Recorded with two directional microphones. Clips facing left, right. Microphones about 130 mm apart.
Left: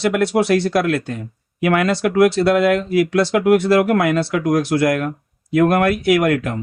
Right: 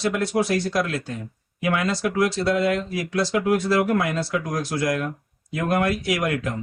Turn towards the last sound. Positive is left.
turn(degrees=65)  # may be behind; listen again after turning